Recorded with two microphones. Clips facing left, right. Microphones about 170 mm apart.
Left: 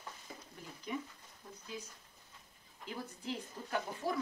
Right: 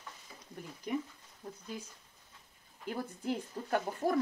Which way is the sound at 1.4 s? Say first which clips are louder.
Right 7 dB; 40° right (ahead or behind).